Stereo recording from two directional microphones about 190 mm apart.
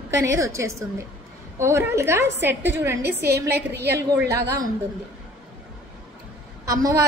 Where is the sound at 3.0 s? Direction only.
55° right (ahead or behind).